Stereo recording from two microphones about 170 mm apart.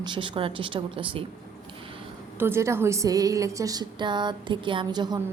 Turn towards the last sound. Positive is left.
turn(degrees=-25)  # may be behind; listen again after turning